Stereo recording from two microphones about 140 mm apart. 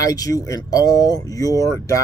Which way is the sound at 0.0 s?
25° left (ahead or behind).